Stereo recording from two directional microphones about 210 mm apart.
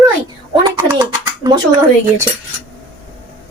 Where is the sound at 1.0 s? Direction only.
20° right (ahead or behind).